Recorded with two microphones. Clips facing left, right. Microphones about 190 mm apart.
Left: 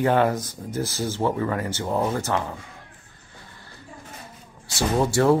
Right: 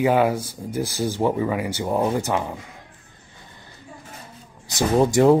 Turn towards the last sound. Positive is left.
turn(degrees=-15)  # may be behind; listen again after turning